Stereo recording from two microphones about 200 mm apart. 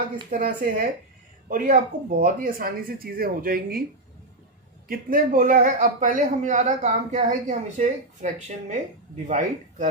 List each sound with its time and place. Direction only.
0.3 s speech: 40° right (ahead or behind)
4.9 s speech: 45° right (ahead or behind)